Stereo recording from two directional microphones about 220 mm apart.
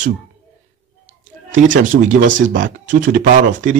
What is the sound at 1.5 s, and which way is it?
Speech, 35° right (ahead or behind).